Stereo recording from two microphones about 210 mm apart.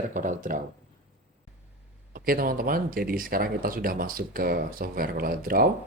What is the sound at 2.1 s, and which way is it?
Speech, 45° right (ahead or behind).